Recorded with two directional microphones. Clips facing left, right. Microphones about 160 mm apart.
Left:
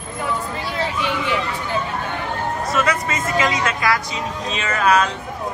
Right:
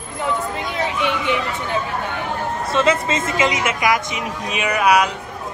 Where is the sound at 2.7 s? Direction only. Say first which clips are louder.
Right 5 dB; 25° right (ahead or behind).